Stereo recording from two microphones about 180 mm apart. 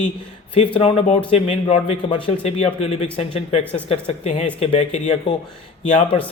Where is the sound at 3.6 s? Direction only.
10° left (ahead or behind).